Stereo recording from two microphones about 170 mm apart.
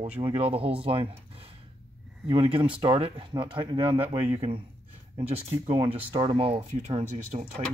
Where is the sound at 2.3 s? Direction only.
30° right (ahead or behind).